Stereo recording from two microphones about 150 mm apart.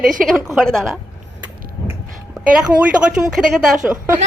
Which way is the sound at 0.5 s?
Centre (ahead or behind).